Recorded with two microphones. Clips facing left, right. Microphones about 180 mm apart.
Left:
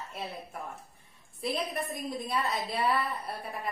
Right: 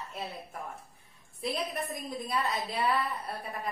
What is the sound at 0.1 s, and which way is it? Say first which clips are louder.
A woman's voice: even; centre (ahead or behind).